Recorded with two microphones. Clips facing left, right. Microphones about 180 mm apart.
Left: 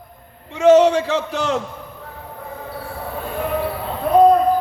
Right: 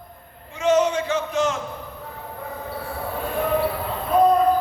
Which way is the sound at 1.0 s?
75° left (ahead or behind).